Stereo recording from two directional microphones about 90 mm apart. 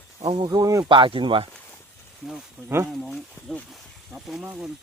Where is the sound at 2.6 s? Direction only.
30° right (ahead or behind).